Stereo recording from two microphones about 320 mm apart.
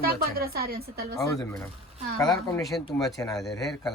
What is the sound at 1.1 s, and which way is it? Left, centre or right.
Speech, centre.